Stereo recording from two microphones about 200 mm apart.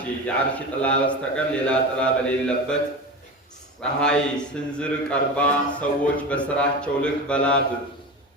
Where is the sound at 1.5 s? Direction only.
5° left (ahead or behind).